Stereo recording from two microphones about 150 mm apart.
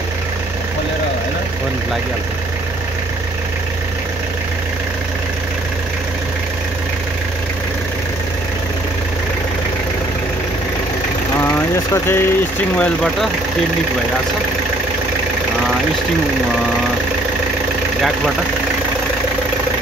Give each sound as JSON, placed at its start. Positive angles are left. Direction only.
{"t": 11.4, "sound": "vehicle", "side_deg": 15}
{"t": 12.7, "sound": "speech", "side_deg": 5}